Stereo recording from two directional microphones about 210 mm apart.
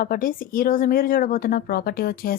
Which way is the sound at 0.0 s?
45° left (ahead or behind).